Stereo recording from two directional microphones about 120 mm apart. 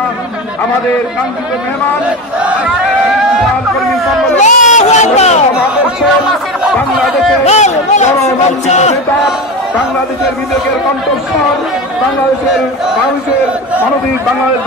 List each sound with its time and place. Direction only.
2.4 s battle cry: 10° right (ahead or behind)
4.4 s speech: 85° left; by 5.4 s 70° left (ahead or behind)
7.4 s speech: 75° left (ahead or behind)